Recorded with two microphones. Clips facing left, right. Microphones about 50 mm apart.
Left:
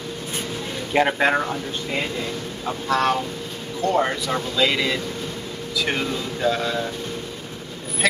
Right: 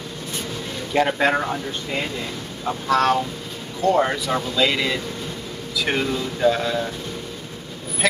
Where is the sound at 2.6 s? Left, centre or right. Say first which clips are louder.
Right 2 dB; centre.